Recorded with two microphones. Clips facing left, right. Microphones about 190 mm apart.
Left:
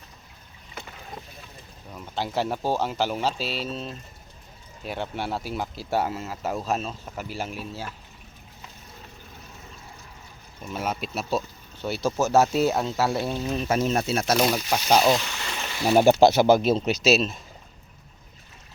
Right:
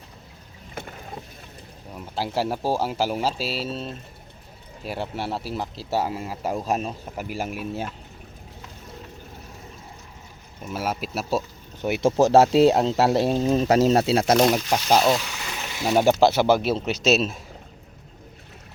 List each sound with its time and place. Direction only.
2.1 s speech: 5° right (ahead or behind)
6.1 s speech: 10° right (ahead or behind)
10.6 s speech: 5° right (ahead or behind)
11.8 s speech: 20° right (ahead or behind)
14.8 s a sound: centre (ahead or behind)
15.9 s speech: 10° left (ahead or behind)
17.0 s speech: centre (ahead or behind)